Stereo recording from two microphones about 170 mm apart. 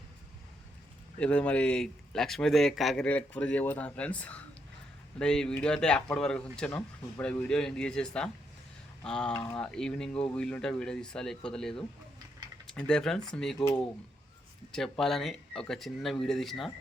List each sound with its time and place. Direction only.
1.2 s speech: 5° left (ahead or behind)
14.7 s speech: 5° left (ahead or behind)